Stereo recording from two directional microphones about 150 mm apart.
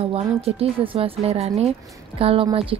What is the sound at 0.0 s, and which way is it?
Speech, 40° right (ahead or behind).